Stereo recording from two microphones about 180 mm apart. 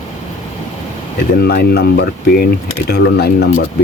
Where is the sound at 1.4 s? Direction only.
60° left (ahead or behind).